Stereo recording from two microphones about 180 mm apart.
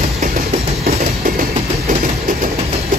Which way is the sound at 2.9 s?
45° right (ahead or behind).